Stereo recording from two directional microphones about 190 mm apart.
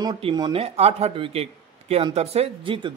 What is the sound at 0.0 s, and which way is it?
Speech, 25° right (ahead or behind).